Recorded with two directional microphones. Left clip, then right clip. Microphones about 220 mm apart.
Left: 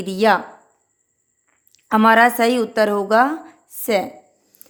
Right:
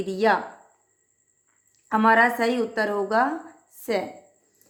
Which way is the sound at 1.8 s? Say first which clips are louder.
Left 5 dB; 45° left (ahead or behind).